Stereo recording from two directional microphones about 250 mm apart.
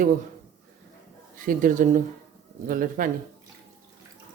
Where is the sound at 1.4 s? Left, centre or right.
Right.